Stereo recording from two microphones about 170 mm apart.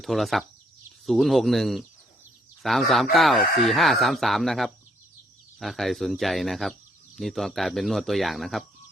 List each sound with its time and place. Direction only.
0.0 s speech: centre (ahead or behind)